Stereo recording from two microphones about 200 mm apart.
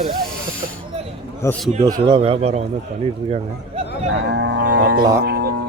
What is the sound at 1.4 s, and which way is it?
Speech, 5° left (ahead or behind).